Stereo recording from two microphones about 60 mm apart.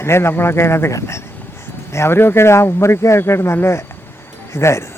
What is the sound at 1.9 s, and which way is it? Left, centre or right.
Speech, left.